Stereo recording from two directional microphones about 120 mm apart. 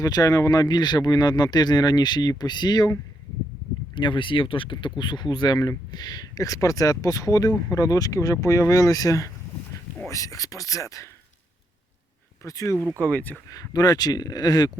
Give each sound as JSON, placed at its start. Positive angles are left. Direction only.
{"t": 0.0, "sound": "speech", "side_deg": 30}
{"t": 3.9, "sound": "speech", "side_deg": 40}
{"t": 12.4, "sound": "speech", "side_deg": 25}
{"t": 13.0, "sound": "speech", "side_deg": 10}
{"t": 13.5, "sound": "speech", "side_deg": 30}